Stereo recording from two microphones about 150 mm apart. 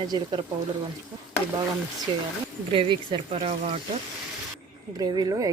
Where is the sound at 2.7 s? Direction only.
35° right (ahead or behind).